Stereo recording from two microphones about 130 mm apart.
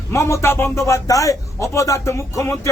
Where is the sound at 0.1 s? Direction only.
20° left (ahead or behind).